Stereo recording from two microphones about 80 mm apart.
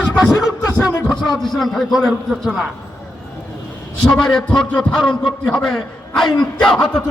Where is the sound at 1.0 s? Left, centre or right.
Centre.